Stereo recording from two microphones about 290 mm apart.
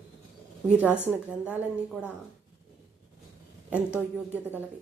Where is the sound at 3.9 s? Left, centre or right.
Centre.